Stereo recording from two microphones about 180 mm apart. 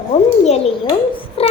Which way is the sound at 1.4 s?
35° left (ahead or behind).